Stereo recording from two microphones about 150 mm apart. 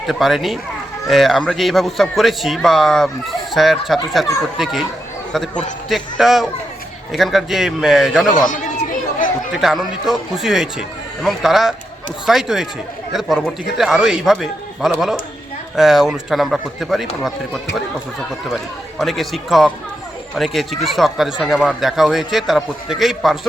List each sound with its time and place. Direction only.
0.1 s speech: centre (ahead or behind)
8.4 s chatter: 60° left (ahead or behind)
9.5 s speech: centre (ahead or behind)